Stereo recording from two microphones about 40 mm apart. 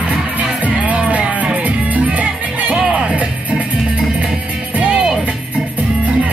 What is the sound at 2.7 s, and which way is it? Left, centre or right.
Music, right.